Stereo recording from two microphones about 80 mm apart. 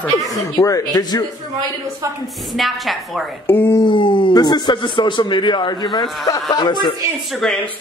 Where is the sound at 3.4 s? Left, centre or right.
Left.